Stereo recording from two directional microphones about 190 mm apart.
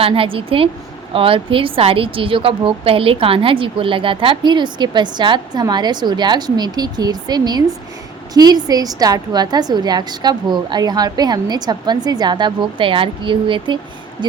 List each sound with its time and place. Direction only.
0.0 s a woman's voice: 30° right (ahead or behind)